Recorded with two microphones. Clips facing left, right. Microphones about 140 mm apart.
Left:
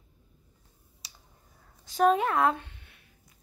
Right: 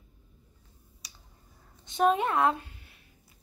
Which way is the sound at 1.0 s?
30° left (ahead or behind).